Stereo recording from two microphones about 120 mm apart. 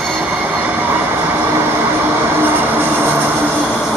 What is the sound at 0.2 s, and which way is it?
Train, 15° right (ahead or behind).